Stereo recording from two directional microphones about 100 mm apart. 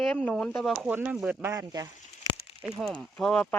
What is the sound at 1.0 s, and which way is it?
Speech, 10° right (ahead or behind).